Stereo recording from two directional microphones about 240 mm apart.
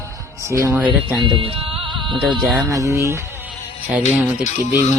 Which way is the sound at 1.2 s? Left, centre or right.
Right.